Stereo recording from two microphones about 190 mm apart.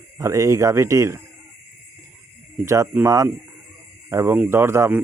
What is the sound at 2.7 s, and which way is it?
Speech, 15° right (ahead or behind).